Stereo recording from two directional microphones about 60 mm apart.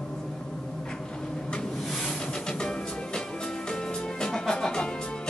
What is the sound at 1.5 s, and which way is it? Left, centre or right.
Music, centre.